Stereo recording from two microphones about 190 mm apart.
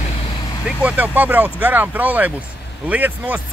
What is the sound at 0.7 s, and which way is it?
Speech, 5° right (ahead or behind).